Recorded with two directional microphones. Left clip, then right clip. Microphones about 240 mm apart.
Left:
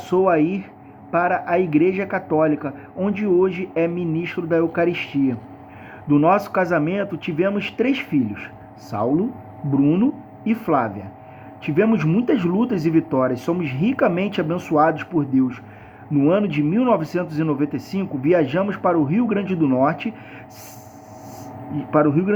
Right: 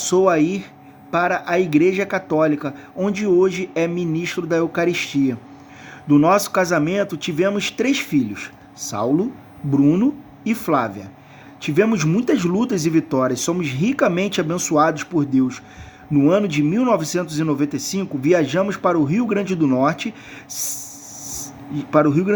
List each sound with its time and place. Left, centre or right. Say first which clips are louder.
0.0 s a man's voice: right 1 dB; right
9.7 s a man's voice: right 2 dB; right
21.8 s a man's voice: right 1 dB; right